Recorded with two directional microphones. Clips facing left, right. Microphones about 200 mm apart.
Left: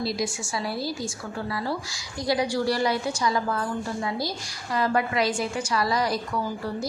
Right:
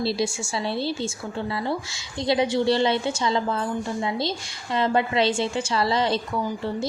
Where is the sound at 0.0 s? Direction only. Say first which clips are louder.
Right 3 dB; 30° right (ahead or behind).